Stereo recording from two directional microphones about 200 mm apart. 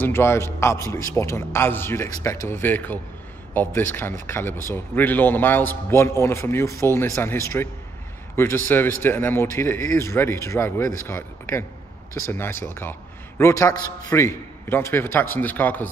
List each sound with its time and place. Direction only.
0.0 s a man's voice: 10° left (ahead or behind)